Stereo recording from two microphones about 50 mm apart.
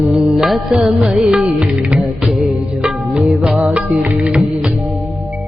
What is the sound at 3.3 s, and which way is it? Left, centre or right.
Music, centre.